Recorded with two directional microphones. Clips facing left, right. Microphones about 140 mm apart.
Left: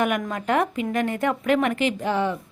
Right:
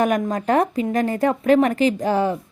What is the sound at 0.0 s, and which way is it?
A woman's voice, 35° right (ahead or behind).